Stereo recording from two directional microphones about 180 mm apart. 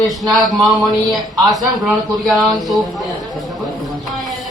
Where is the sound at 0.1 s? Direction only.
Centre (ahead or behind).